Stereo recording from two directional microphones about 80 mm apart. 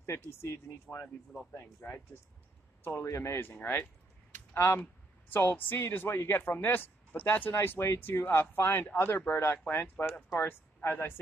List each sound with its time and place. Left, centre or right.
0.3 s speech: left
1.0 s speech: centre
1.5 s speech: left
4.6 s speech: left